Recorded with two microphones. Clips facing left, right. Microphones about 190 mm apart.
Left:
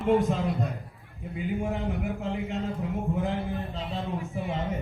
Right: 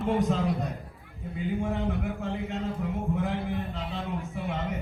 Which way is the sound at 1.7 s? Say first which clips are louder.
Even; 15° left (ahead or behind).